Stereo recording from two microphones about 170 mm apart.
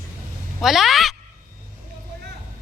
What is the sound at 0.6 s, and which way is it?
Speech, centre (ahead or behind).